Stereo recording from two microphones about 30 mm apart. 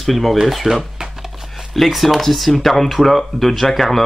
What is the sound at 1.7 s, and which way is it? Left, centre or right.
Speech, centre.